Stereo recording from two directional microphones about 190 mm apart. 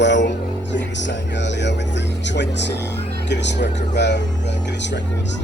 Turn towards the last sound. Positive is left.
turn(degrees=65)  # may be behind; listen again after turning